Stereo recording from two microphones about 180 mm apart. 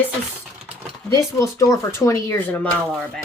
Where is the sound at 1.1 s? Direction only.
20° left (ahead or behind).